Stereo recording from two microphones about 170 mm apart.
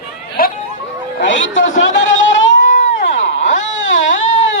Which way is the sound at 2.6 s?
50° left (ahead or behind).